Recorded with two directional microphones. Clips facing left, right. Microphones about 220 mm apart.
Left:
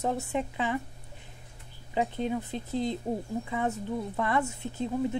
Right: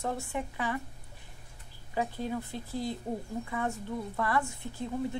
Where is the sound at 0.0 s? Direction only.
20° left (ahead or behind).